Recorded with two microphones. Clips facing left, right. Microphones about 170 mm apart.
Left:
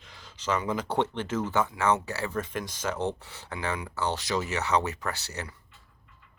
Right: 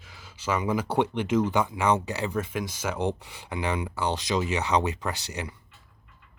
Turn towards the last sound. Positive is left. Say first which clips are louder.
# right 2 dB
turn(degrees=-15)  # may be behind; listen again after turning